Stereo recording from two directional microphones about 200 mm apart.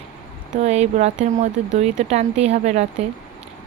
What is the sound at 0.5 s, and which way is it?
A woman's voice, 30° right (ahead or behind).